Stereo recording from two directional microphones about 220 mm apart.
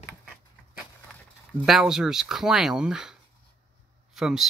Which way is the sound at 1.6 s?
Centre (ahead or behind).